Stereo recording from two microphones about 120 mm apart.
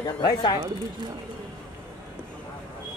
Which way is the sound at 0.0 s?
35° left (ahead or behind).